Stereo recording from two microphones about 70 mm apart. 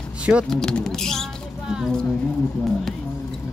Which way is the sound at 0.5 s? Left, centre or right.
Centre.